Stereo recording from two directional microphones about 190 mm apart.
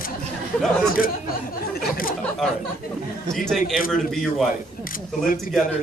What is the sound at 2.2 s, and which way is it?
A man's voice, centre (ahead or behind).